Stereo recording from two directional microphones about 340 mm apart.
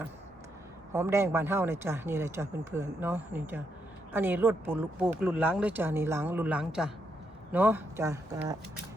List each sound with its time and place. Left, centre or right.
0.9 s speech: centre